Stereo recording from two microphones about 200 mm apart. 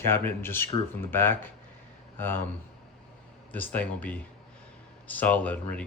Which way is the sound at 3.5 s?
10° left (ahead or behind).